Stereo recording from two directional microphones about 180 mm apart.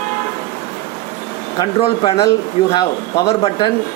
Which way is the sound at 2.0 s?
20° left (ahead or behind).